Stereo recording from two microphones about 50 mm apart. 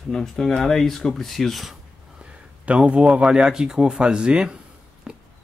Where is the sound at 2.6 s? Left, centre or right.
Right.